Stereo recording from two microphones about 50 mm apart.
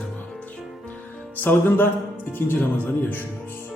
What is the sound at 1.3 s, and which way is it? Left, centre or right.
Speech, left.